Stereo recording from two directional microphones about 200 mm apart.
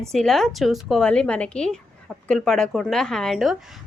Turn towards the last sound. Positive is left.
turn(degrees=0)  # may be behind; listen again after turning